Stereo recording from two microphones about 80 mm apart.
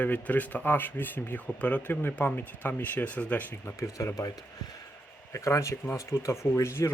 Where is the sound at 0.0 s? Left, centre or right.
Centre.